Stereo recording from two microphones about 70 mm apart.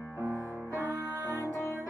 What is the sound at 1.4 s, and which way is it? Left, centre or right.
Music, left.